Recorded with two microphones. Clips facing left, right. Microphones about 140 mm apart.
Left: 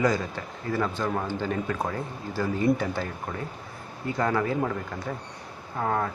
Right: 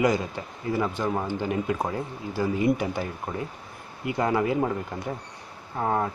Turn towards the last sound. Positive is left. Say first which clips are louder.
# right 1 dB
turn(degrees=-20)  # may be behind; listen again after turning